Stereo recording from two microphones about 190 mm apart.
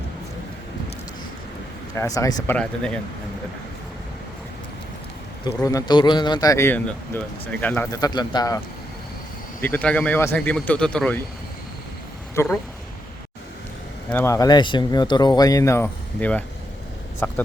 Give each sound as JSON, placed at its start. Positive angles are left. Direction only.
{"t": 2.0, "sound": "a man's voice", "side_deg": 15}
{"t": 2.6, "sound": "speech", "side_deg": 5}
{"t": 5.6, "sound": "a man's voice", "side_deg": 20}
{"t": 12.3, "sound": "speech", "side_deg": 15}
{"t": 14.1, "sound": "speech", "side_deg": 15}
{"t": 17.2, "sound": "a sound", "side_deg": 10}